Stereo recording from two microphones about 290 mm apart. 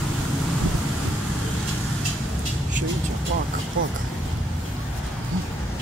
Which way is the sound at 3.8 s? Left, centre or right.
Right.